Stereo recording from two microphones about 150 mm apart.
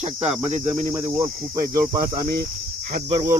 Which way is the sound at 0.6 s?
15° right (ahead or behind).